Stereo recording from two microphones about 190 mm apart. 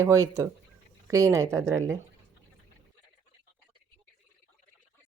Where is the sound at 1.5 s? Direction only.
5° left (ahead or behind).